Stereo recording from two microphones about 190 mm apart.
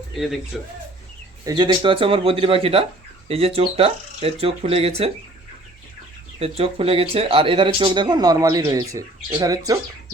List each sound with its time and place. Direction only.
0.1 s speech: centre (ahead or behind)
1.5 s speech: 25° right (ahead or behind)
6.4 s speech: 30° right (ahead or behind)